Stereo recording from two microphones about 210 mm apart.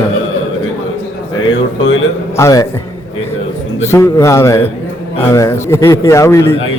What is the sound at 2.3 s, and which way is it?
Speech, 15° left (ahead or behind).